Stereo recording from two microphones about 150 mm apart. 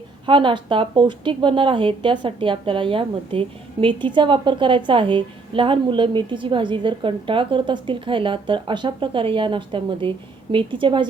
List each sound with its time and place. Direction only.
0.3 s a woman's voice: 35° right (ahead or behind)